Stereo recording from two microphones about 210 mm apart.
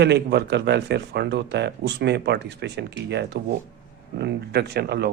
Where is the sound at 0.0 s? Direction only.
50° right (ahead or behind).